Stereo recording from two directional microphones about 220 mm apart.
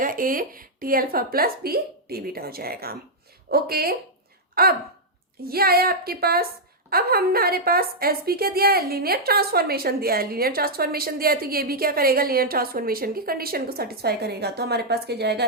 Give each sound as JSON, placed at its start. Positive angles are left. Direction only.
{"t": 0.0, "sound": "a woman's voice", "side_deg": -40}